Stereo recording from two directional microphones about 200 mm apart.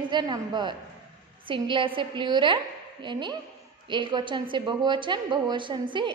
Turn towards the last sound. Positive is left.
turn(degrees=-25)  # may be behind; listen again after turning